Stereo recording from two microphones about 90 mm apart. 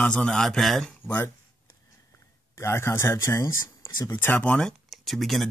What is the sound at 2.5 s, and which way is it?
Speech, 30° left (ahead or behind).